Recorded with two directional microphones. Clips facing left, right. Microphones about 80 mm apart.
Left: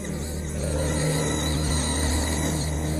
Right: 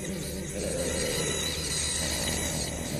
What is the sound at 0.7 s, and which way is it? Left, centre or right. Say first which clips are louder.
Vehicle: left 6 dB; left.